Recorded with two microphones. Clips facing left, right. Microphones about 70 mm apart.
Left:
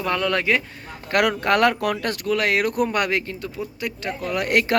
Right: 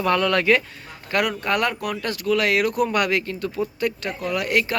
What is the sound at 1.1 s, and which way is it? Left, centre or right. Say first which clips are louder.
Speech: left 3 dB; left.